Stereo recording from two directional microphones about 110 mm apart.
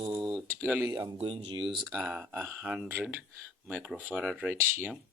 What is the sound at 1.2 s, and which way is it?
Speech, 55° right (ahead or behind).